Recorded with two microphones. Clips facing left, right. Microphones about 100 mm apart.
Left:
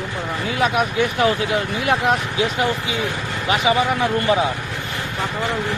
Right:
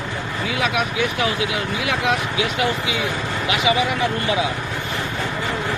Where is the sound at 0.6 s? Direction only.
45° left (ahead or behind).